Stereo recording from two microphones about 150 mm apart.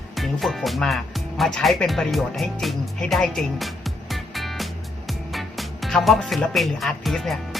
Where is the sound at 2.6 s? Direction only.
Centre (ahead or behind).